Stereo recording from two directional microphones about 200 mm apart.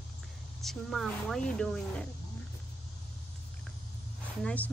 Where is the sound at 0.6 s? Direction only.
Centre (ahead or behind).